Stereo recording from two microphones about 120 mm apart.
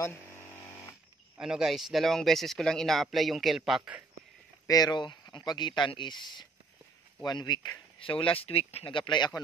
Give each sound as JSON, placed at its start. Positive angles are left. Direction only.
{"t": 1.4, "sound": "speech", "side_deg": -5}
{"t": 4.6, "sound": "speech", "side_deg": 35}